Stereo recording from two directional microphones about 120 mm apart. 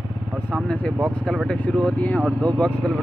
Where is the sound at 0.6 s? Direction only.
10° left (ahead or behind).